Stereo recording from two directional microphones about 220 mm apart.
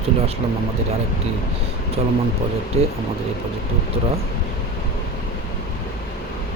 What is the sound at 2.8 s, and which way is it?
Speech, 30° right (ahead or behind).